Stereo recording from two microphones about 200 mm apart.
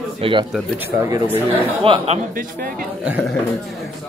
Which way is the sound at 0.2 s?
25° right (ahead or behind).